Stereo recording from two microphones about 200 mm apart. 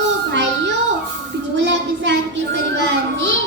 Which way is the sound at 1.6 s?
65° right (ahead or behind).